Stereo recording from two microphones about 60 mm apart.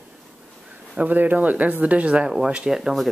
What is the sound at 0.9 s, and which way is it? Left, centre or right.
Speech, right.